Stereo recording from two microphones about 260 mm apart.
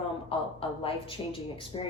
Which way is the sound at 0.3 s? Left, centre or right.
Left.